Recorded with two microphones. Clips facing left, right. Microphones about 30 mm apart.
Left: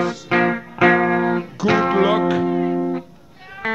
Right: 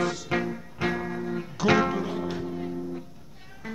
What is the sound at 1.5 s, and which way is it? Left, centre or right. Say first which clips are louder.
Music: left 1 dB; centre.